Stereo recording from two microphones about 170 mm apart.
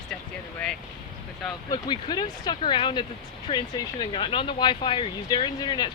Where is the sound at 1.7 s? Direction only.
25° left (ahead or behind).